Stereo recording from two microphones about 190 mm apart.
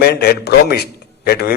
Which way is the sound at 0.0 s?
55° left (ahead or behind).